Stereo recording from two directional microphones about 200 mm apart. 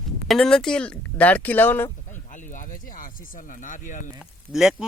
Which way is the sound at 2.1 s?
40° left (ahead or behind).